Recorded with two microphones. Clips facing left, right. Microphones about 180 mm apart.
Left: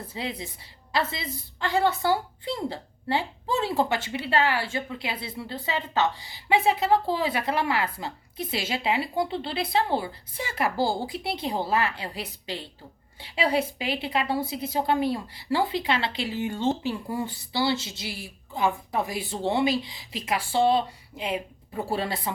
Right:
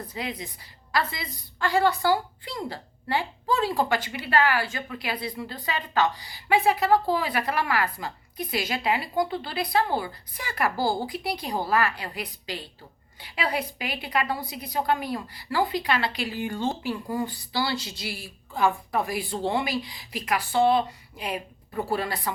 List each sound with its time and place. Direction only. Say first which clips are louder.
0.1 s a woman's voice: left 3 dB; 25° left (ahead or behind)